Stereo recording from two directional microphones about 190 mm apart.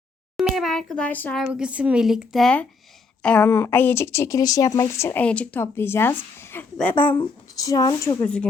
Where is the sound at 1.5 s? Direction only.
5° right (ahead or behind).